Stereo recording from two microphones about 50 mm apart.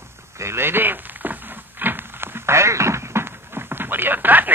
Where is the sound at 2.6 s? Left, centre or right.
Right.